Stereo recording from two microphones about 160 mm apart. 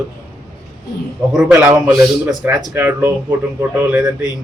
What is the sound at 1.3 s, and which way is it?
Speech, 10° right (ahead or behind).